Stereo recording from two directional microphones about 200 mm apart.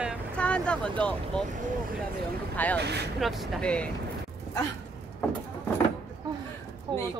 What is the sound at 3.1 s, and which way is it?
Speech, centre (ahead or behind).